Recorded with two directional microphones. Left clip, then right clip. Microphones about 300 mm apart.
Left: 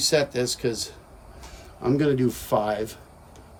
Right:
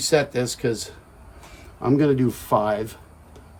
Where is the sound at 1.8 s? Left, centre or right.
Centre.